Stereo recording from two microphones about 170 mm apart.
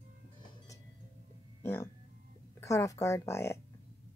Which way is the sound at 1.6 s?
10° left (ahead or behind).